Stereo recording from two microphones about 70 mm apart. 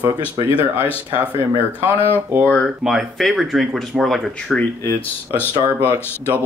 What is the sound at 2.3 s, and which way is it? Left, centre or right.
Speech, right.